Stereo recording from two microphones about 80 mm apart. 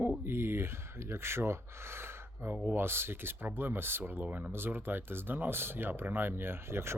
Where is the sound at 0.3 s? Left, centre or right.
Right.